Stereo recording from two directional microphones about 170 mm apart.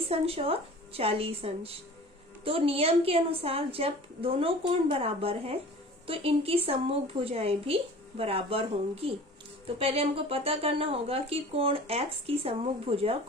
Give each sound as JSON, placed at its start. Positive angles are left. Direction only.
{"t": 0.1, "sound": "speech", "side_deg": -35}